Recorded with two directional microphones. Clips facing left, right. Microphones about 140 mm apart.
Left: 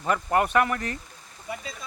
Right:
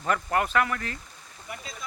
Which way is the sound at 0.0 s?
15° left (ahead or behind).